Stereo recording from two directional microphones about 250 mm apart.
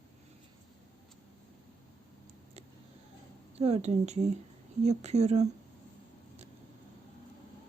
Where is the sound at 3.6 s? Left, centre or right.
Right.